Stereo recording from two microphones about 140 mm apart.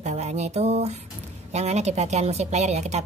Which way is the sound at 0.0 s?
55° right (ahead or behind).